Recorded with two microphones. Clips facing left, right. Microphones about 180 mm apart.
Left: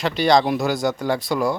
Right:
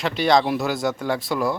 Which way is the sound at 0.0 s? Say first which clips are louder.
Left 2 dB; centre (ahead or behind).